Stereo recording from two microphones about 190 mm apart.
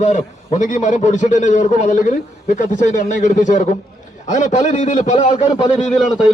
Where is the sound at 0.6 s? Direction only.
40° left (ahead or behind).